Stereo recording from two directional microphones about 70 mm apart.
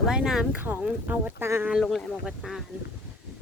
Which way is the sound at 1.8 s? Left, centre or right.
Centre.